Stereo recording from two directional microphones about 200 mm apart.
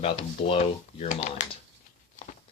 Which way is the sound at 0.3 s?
30° left (ahead or behind).